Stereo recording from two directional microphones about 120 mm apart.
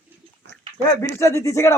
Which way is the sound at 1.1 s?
20° left (ahead or behind).